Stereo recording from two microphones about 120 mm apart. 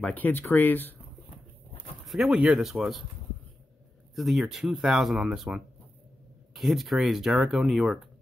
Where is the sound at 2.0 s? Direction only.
Centre (ahead or behind).